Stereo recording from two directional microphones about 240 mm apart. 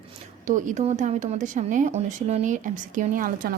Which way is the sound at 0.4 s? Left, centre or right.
Right.